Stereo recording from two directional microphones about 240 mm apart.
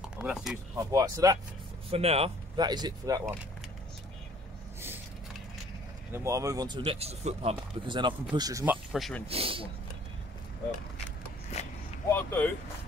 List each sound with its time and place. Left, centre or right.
0.2 s speech: centre
0.7 s speech: centre
1.9 s speech: right
6.1 s speech: centre
8.9 s speech: centre
9.3 s speech: right
12.2 s speech: centre